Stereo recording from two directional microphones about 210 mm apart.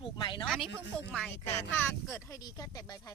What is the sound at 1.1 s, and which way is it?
Speech, 5° left (ahead or behind).